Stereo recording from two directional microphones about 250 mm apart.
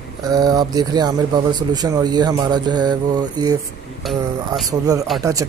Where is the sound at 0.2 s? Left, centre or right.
Centre.